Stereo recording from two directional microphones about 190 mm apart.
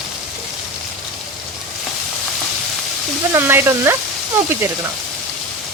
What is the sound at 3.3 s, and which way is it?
Speech, 10° right (ahead or behind).